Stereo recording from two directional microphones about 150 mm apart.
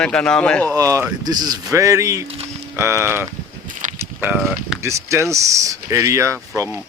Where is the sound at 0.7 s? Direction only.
20° right (ahead or behind).